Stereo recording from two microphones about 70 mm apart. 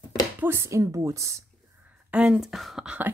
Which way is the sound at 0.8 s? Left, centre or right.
Right.